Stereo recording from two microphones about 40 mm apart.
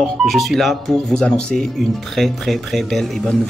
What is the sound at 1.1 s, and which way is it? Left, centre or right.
Speech, left.